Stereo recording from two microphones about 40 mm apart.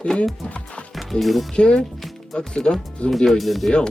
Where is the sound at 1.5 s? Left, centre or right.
Left.